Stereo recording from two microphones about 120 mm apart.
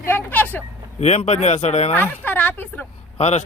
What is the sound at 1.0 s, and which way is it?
Speech, 65° left (ahead or behind).